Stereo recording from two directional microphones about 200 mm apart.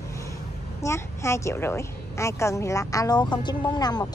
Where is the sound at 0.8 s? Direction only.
15° left (ahead or behind).